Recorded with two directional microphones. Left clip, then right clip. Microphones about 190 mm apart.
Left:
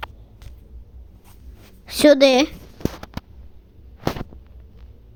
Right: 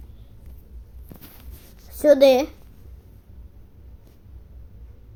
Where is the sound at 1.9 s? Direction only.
90° left.